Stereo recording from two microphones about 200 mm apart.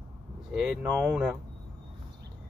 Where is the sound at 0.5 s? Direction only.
Centre (ahead or behind).